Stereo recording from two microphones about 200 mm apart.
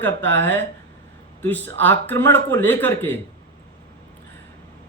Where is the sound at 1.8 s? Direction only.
10° left (ahead or behind).